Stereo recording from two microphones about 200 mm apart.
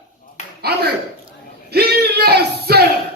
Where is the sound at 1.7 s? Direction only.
50° right (ahead or behind).